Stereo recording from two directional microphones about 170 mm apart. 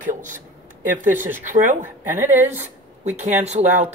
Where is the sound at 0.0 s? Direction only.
50° right (ahead or behind).